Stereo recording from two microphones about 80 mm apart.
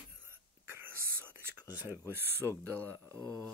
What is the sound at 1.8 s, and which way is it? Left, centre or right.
Speech, right.